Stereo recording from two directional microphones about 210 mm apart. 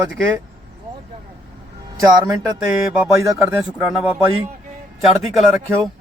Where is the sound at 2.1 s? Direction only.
20° right (ahead or behind).